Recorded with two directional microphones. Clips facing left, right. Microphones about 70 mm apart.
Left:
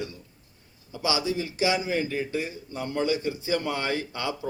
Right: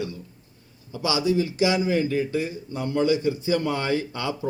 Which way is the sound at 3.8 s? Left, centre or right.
Right.